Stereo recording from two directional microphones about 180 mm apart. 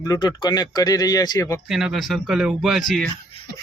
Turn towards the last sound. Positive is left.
turn(degrees=0)  # may be behind; listen again after turning